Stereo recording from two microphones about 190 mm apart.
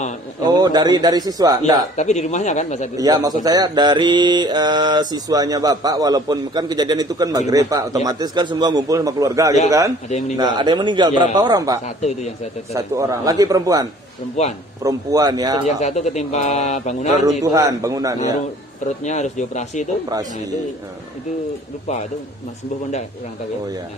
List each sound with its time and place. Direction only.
0.5 s mantra: 20° right (ahead or behind)
2.0 s speech: 35° left (ahead or behind)
3.0 s mantra: 20° right (ahead or behind)
9.7 s a man's voice: 15° right (ahead or behind)
10.0 s speech: 35° left (ahead or behind)
10.3 s mantra: 25° right (ahead or behind)
12.7 s a man's voice: 15° right (ahead or behind)
14.8 s mantra: 20° right (ahead or behind)
15.6 s speech: 40° left (ahead or behind)
17.4 s a man's voice: 15° right (ahead or behind)
19.0 s speech: 40° left (ahead or behind)